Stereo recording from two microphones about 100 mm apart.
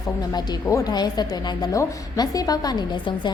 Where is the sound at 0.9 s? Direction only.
45° left (ahead or behind).